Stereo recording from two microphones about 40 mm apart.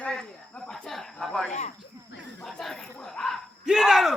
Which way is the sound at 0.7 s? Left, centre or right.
Centre.